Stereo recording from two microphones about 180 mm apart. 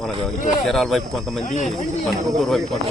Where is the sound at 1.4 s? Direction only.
45° left (ahead or behind).